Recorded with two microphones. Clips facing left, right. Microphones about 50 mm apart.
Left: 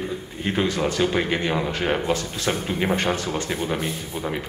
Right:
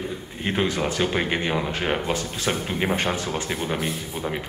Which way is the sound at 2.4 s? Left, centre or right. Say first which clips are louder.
Left 1 dB; centre.